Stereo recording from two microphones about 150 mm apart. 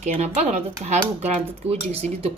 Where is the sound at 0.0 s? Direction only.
50° right (ahead or behind).